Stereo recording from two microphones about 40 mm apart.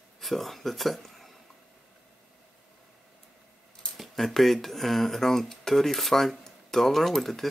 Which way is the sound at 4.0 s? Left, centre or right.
Centre.